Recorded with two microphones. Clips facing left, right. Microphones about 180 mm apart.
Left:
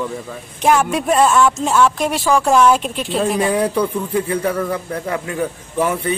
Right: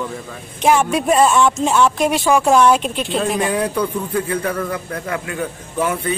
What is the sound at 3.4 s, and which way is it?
Speech, 25° left (ahead or behind).